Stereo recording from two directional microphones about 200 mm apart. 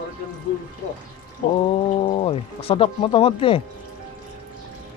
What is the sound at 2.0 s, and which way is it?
Speech, 25° left (ahead or behind).